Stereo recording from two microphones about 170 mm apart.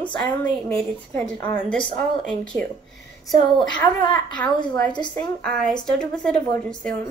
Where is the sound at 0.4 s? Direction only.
10° left (ahead or behind).